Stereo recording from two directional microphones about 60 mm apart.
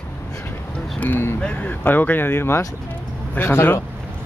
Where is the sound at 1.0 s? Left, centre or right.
Left.